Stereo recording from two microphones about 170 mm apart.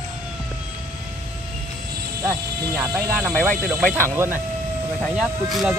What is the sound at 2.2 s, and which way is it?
Speech, 15° right (ahead or behind).